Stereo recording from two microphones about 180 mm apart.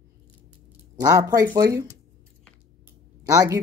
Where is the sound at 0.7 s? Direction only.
20° right (ahead or behind).